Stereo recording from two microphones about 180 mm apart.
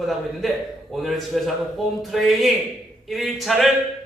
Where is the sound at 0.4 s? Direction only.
Centre (ahead or behind).